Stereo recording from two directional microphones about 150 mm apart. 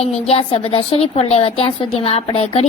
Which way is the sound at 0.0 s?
40° left (ahead or behind).